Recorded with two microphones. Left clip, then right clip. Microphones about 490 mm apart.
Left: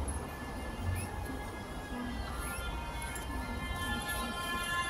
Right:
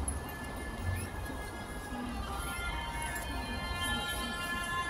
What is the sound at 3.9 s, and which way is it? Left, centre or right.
Music, left.